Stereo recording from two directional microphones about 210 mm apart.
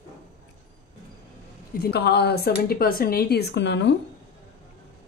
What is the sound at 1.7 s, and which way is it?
Speech, 50° left (ahead or behind).